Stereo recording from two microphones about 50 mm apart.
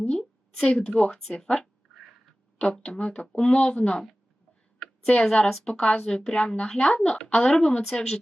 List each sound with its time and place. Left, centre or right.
0.1 s a sound: centre
0.8 s speech: left
1.1 s a woman's voice: centre
2.8 s speech: centre
5.2 s a woman's voice: centre